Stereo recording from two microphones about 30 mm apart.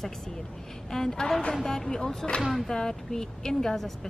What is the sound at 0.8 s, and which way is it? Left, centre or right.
A woman's voice, centre.